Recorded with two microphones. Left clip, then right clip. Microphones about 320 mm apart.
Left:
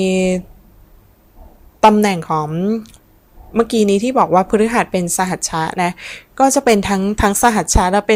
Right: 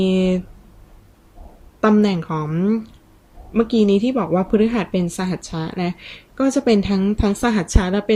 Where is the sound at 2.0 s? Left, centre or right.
Centre.